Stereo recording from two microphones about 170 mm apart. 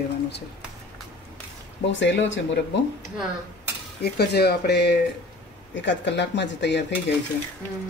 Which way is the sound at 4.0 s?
70° left (ahead or behind).